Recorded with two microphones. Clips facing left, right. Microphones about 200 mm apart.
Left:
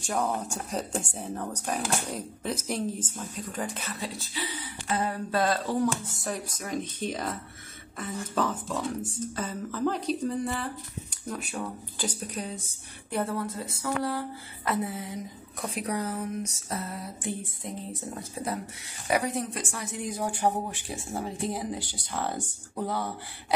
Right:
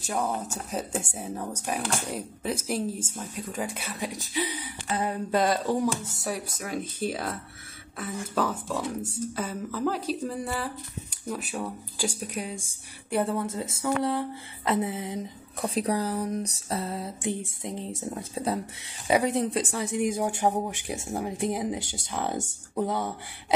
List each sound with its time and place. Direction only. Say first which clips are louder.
0.0 s speech: even; 5° right (ahead or behind); by 15.1 s 20° right (ahead or behind)
15.6 s a sound: right 4 dB; 30° right (ahead or behind)
19.0 s speech: right 4 dB; 25° right (ahead or behind)